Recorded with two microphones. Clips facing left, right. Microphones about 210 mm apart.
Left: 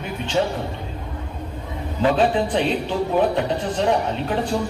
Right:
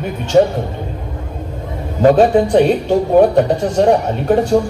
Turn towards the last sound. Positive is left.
turn(degrees=-45)  # may be behind; listen again after turning